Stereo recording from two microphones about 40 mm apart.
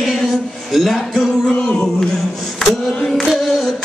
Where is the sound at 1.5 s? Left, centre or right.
Left.